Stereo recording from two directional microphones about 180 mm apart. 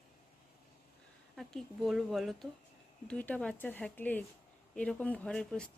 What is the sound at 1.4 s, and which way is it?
Speech, centre (ahead or behind).